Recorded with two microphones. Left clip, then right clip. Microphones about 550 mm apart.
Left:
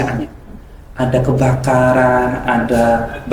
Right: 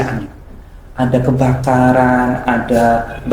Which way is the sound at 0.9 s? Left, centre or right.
Right.